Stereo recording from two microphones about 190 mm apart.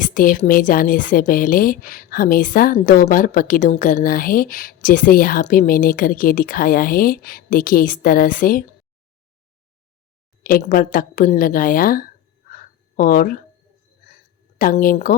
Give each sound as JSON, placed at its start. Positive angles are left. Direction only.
{"t": 0.0, "sound": "a woman's voice", "side_deg": 45}
{"t": 10.4, "sound": "a woman's voice", "side_deg": 45}
{"t": 14.6, "sound": "a woman's voice", "side_deg": 45}